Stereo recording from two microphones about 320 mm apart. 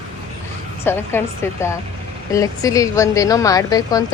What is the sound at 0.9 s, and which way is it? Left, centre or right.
A woman's voice, centre.